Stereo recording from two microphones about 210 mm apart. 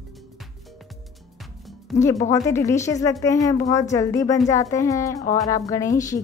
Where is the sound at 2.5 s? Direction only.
15° left (ahead or behind).